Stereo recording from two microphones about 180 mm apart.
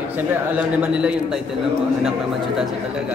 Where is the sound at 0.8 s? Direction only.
5° right (ahead or behind).